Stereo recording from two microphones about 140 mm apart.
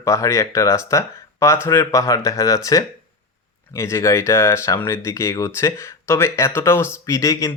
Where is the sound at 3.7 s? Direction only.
20° left (ahead or behind).